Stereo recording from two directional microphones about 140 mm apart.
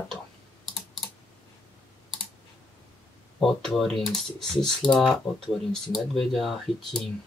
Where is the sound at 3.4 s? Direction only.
Centre (ahead or behind).